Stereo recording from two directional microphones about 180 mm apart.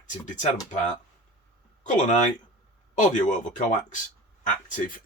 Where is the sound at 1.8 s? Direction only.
45° left (ahead or behind).